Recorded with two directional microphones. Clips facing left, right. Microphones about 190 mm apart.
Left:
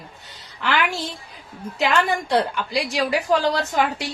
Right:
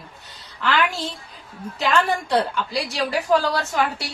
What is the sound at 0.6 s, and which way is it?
Speech, 15° left (ahead or behind).